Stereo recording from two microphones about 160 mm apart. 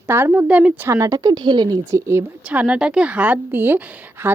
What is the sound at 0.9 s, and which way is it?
A woman's voice, 20° right (ahead or behind).